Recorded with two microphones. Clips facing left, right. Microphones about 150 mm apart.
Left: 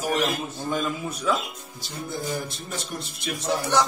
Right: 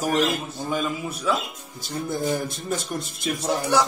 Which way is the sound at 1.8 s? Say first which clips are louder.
Right 6 dB; 50° right (ahead or behind).